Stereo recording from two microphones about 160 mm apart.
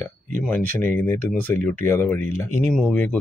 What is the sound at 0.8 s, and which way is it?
Speech, 15° left (ahead or behind).